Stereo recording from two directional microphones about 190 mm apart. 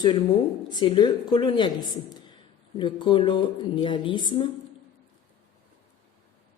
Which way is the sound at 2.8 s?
25° left (ahead or behind).